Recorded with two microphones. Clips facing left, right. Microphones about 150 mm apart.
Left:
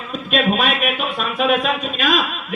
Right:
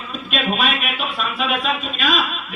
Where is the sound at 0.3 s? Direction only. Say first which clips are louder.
Left 3 dB; 45° left (ahead or behind).